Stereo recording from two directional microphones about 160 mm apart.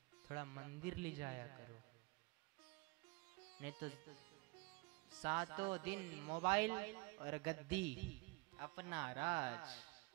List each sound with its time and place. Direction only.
0.3 s a man's voice: 20° right (ahead or behind)
3.6 s a man's voice: 15° right (ahead or behind)
5.2 s a man's voice: 15° right (ahead or behind)